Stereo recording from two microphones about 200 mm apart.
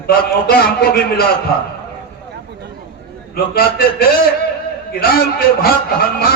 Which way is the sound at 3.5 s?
50° left (ahead or behind).